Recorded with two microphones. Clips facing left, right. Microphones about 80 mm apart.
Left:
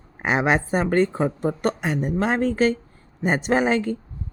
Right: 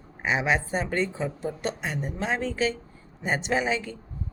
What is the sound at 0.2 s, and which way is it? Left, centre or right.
A woman's voice, left.